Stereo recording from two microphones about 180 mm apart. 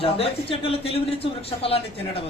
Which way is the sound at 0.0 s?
30° left (ahead or behind).